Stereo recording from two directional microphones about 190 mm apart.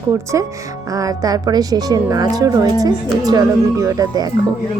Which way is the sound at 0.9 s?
20° right (ahead or behind).